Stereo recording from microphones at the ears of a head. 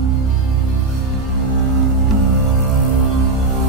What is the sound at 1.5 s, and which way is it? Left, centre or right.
Music, right.